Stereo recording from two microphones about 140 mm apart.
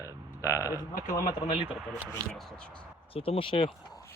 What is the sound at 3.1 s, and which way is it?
Speech, 40° left (ahead or behind).